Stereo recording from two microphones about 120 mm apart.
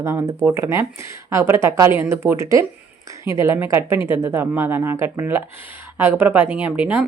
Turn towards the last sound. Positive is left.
turn(degrees=-15)  # may be behind; listen again after turning